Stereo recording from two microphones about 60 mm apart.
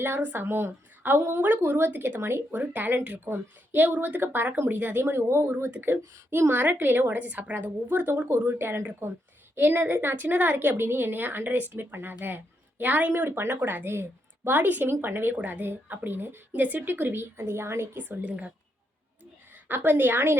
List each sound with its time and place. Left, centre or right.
0.2 s a woman's voice: right
2.6 s speech: right
3.2 s a woman's voice: right
16.6 s a woman's voice: right
18.3 s speech: right
19.6 s a woman's voice: right